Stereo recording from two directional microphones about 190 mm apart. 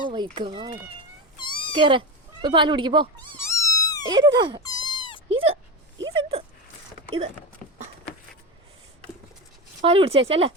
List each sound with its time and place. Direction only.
0.3 s dog: 25° right (ahead or behind)
1.4 s cat: 25° left (ahead or behind)
1.8 s speech: 25° right (ahead or behind)
3.4 s cat: 15° left (ahead or behind)
4.1 s dog: 20° right (ahead or behind)
4.6 s cat: 20° left (ahead or behind)
5.3 s dog: 30° right (ahead or behind)
6.0 s speech: 25° right (ahead or behind)
9.8 s speech: 30° right (ahead or behind)